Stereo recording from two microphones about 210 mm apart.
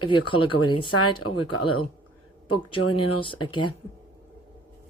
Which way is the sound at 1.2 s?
90° left.